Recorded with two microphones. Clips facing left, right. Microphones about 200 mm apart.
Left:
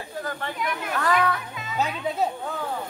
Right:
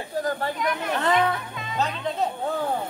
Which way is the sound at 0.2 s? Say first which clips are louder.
Right 6 dB; 35° right (ahead or behind).